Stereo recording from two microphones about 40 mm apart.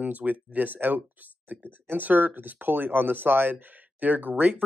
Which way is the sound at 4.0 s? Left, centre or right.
Right.